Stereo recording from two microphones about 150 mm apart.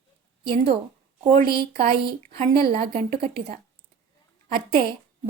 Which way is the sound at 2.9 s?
45° right (ahead or behind).